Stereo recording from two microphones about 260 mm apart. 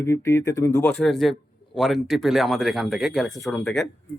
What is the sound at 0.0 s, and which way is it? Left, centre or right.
A man's voice, centre.